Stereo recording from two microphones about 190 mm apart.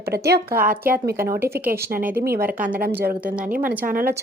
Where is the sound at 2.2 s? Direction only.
55° right (ahead or behind).